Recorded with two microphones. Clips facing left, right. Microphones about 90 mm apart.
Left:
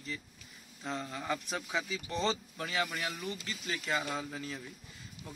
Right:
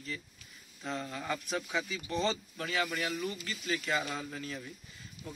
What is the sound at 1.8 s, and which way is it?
Speech, 30° left (ahead or behind).